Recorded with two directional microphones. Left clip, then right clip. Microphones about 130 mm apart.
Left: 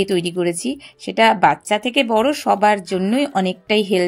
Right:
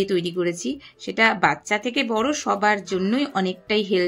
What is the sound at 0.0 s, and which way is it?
Speech, 50° left (ahead or behind).